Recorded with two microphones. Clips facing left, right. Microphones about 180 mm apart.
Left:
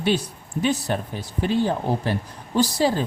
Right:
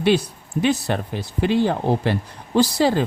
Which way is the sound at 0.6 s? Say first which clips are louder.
Right 3 dB; 75° right (ahead or behind).